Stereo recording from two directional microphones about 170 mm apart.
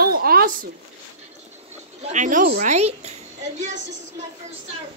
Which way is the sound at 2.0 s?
45° right (ahead or behind).